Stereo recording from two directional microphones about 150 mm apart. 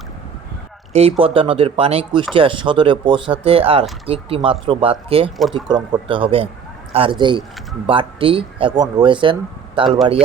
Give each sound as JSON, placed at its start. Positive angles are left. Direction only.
{"t": 0.9, "sound": "speech", "side_deg": -40}
{"t": 5.4, "sound": "speech", "side_deg": 0}
{"t": 5.6, "sound": "speech", "side_deg": -30}